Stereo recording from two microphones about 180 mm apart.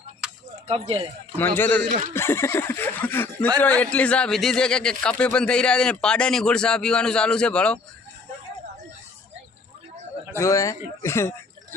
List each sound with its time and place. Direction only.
0.2 s a sound: 5° right (ahead or behind)
0.7 s speech: 35° right (ahead or behind)
1.4 s speech: 10° left (ahead or behind)
10.3 s speech: 15° left (ahead or behind)